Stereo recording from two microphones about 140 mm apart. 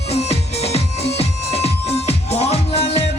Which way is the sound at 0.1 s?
50° left (ahead or behind).